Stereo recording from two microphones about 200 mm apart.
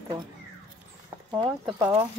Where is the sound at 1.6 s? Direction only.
15° right (ahead or behind).